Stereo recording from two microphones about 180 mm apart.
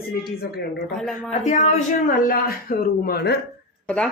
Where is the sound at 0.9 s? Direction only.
Centre (ahead or behind).